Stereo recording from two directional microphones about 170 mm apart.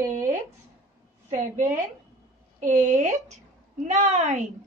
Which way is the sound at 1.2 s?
45° right (ahead or behind).